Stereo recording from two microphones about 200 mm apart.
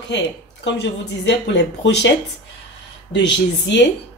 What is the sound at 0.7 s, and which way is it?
Speech, 65° left (ahead or behind).